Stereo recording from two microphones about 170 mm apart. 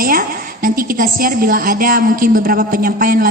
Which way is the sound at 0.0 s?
60° right (ahead or behind).